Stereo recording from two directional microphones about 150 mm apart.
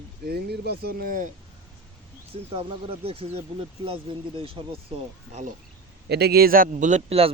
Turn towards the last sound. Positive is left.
turn(degrees=-40)  # may be behind; listen again after turning